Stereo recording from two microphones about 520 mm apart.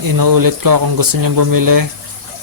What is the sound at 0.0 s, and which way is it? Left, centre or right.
Speech, right.